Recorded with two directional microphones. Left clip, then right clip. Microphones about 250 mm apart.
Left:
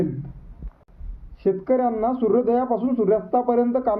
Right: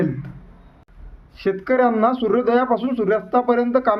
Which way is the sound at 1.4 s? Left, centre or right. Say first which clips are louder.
Right 3 dB; centre.